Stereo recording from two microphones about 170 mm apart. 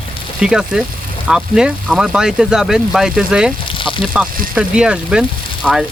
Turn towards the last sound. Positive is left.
turn(degrees=-5)  # may be behind; listen again after turning